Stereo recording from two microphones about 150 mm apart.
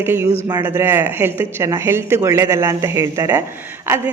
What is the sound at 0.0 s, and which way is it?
Speech, 15° right (ahead or behind).